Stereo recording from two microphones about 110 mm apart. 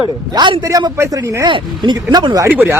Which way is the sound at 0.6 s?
30° right (ahead or behind).